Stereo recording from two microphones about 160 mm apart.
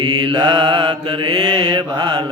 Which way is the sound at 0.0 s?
30° right (ahead or behind).